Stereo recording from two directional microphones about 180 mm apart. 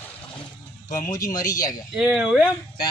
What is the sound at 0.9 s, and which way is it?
Speech, 20° left (ahead or behind).